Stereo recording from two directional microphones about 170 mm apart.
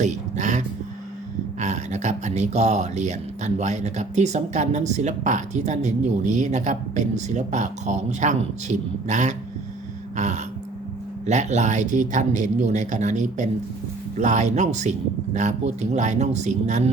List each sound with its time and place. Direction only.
0.0 s speech: 45° right (ahead or behind)
10.2 s a sound: 45° right (ahead or behind)
11.3 s speech: 45° right (ahead or behind)